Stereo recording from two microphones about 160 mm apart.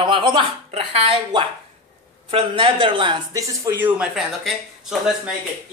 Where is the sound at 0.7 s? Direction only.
35° right (ahead or behind); by 5.3 s 5° right (ahead or behind).